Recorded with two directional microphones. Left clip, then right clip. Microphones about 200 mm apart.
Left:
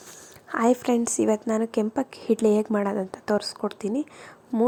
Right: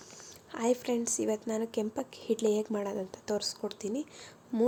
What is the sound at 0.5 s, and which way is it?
Speech, 25° left (ahead or behind).